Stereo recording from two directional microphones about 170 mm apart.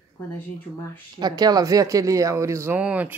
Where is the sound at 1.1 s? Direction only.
25° right (ahead or behind); by 3.2 s 10° right (ahead or behind).